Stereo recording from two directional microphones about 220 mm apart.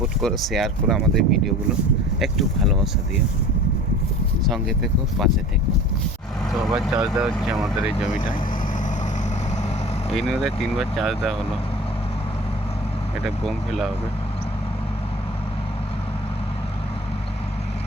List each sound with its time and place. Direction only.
0.2 s speech: centre (ahead or behind)
4.4 s speech: centre (ahead or behind)
6.5 s vehicle: centre (ahead or behind)
7.0 s speech: centre (ahead or behind)
10.2 s speech: centre (ahead or behind)
13.2 s speech: centre (ahead or behind)